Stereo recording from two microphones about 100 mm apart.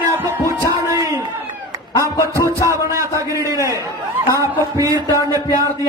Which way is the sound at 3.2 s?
30° right (ahead or behind).